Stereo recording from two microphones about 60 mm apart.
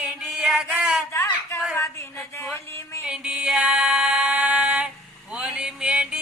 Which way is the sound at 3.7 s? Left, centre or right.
Centre.